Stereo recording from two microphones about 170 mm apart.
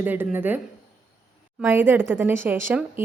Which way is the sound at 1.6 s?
10° right (ahead or behind).